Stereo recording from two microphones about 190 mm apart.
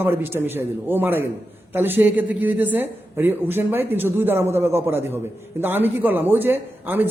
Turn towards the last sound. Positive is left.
turn(degrees=-10)  # may be behind; listen again after turning